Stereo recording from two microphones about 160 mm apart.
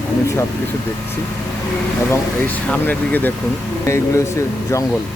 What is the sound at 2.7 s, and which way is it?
Speech, 10° left (ahead or behind).